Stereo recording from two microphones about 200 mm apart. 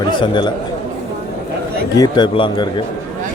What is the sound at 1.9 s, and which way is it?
Speech, 20° left (ahead or behind).